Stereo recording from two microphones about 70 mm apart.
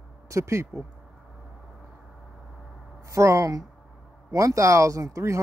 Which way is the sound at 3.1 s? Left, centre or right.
Right.